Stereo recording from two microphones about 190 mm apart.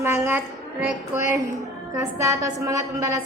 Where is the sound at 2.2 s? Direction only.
15° right (ahead or behind).